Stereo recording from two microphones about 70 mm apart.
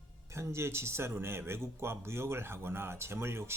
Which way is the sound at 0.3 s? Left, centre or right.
Right.